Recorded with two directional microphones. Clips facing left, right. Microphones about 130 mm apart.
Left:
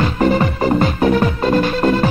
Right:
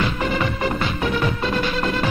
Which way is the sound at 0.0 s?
40° left (ahead or behind).